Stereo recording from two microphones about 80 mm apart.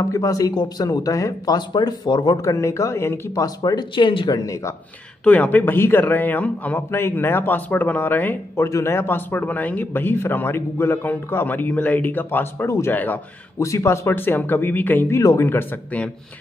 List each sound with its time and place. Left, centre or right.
0.0 s speech: left
2.4 s speech: left
3.4 s speech: left
3.9 s speech: left
4.4 s speech: left
5.2 s a man's voice: centre
8.5 s a man's voice: left
12.6 s speech: left
12.9 s a man's voice: left
13.6 s a man's voice: left
15.0 s speech: left
15.4 s a man's voice: left